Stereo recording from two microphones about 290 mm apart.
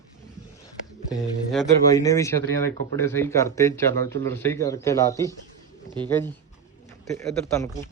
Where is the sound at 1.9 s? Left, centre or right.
Centre.